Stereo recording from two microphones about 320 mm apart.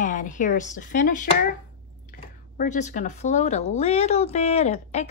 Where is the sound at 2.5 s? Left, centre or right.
Left.